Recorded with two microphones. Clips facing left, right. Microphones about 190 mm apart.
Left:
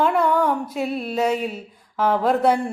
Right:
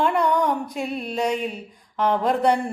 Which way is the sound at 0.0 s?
5° left (ahead or behind).